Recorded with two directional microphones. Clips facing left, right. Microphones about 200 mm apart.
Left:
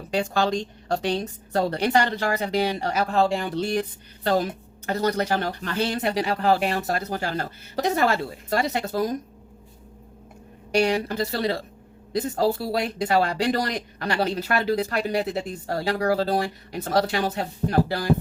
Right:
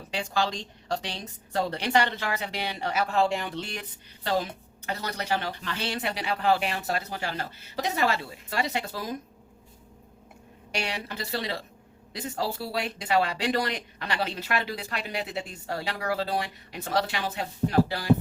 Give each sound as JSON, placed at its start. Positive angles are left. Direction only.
{"t": 0.1, "sound": "a woman's voice", "side_deg": 50}
{"t": 10.8, "sound": "a woman's voice", "side_deg": 40}